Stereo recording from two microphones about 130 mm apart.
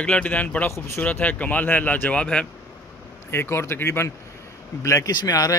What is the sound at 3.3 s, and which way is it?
Speech, 20° left (ahead or behind).